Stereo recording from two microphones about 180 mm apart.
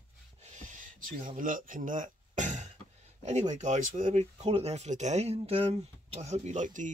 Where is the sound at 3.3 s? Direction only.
40° right (ahead or behind).